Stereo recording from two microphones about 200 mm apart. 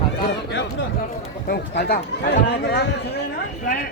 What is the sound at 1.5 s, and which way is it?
Speech, 55° left (ahead or behind).